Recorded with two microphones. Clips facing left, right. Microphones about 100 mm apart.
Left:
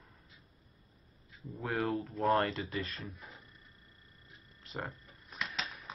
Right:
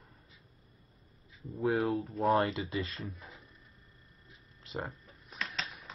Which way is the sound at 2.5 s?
20° right (ahead or behind).